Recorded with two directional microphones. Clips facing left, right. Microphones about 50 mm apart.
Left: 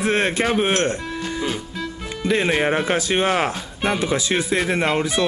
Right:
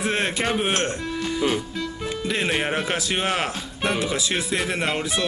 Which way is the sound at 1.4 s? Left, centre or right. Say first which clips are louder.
Right 4 dB; centre.